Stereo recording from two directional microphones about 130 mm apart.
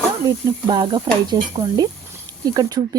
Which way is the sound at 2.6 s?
30° right (ahead or behind).